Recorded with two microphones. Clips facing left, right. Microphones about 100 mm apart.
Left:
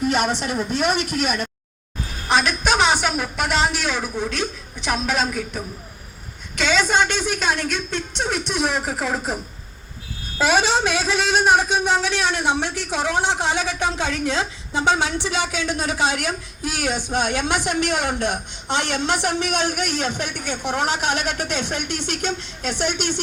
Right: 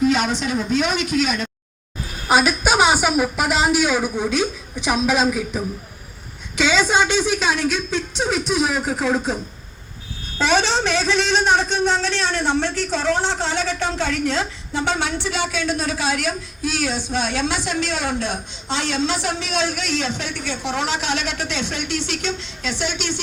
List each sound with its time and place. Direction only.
0.0 s a man's voice: 55° left (ahead or behind)
2.2 s a woman's voice: 5° right (ahead or behind)
6.7 s a woman's voice: 5° right (ahead or behind); by 14.8 s 20° left (ahead or behind)
16.9 s a woman's voice: 55° left (ahead or behind)